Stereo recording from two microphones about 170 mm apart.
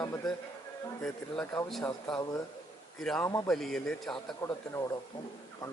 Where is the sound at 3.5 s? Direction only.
Centre (ahead or behind).